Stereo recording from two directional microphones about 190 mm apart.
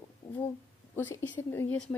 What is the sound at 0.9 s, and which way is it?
Speech, 10° left (ahead or behind).